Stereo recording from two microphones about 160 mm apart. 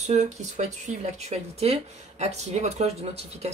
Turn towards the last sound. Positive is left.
turn(degrees=-40)  # may be behind; listen again after turning